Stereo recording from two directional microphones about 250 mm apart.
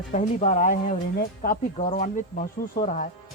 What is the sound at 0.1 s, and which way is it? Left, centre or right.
Speech, left.